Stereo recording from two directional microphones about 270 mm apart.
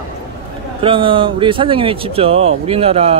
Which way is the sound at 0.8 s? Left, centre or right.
Centre.